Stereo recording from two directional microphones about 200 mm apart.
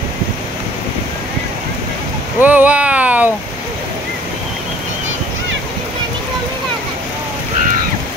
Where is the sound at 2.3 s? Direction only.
10° right (ahead or behind).